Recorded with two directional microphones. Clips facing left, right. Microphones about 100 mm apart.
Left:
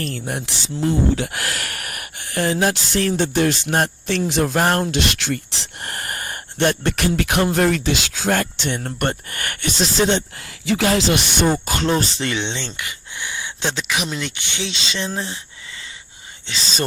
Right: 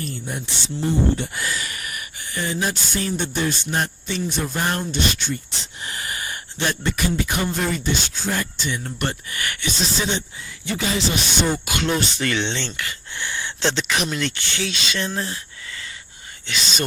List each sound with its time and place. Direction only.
0.0 s speech: 80° left
4.6 s speech: 55° left (ahead or behind)
4.9 s speech: 90° left
5.8 s speech: 55° left (ahead or behind)
8.8 s speech: 50° left (ahead or behind)
10.7 s speech: 85° left; by 11.4 s 65° left (ahead or behind)
11.4 s speech: 35° left (ahead or behind)
12.3 s speech: 20° left (ahead or behind)
14.1 s speech: 15° left (ahead or behind)
16.5 s speech: 30° left (ahead or behind)